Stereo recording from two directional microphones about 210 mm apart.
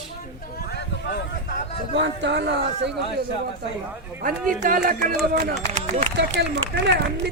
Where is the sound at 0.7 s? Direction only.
55° left (ahead or behind).